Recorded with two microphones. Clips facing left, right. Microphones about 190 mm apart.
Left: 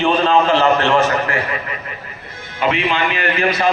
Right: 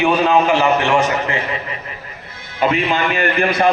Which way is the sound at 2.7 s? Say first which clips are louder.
Left 2 dB; 45° right (ahead or behind).